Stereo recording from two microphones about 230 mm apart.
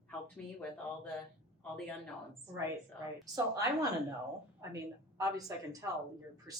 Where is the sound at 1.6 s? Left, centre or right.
Centre.